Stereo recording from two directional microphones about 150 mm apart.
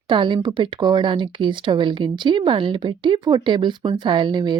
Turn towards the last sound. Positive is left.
turn(degrees=-30)  # may be behind; listen again after turning